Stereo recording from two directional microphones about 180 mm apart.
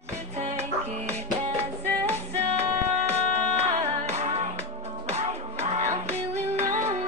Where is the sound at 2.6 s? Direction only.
35° right (ahead or behind).